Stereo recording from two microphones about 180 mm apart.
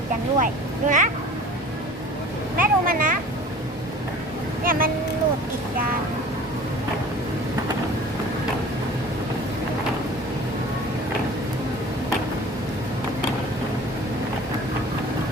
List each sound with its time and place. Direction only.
0.3 s speech: 45° right (ahead or behind)
2.6 s speech: 50° right (ahead or behind)
4.6 s speech: 50° right (ahead or behind)